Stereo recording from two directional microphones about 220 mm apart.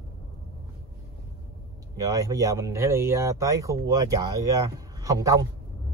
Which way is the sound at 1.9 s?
15° right (ahead or behind).